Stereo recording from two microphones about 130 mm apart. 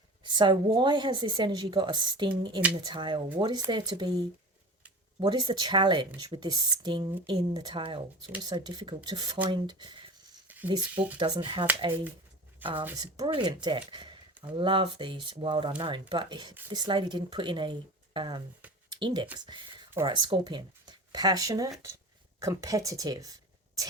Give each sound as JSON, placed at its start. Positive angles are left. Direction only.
{"t": 0.3, "sound": "speech", "side_deg": -35}
{"t": 12.6, "sound": "speech", "side_deg": -15}
{"t": 13.0, "sound": "speech", "side_deg": -35}